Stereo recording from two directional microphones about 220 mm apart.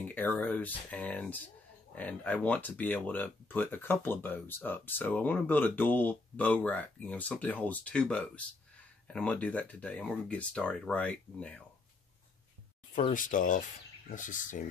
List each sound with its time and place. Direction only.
0.1 s speech: 10° left (ahead or behind)
13.1 s speech: 35° left (ahead or behind)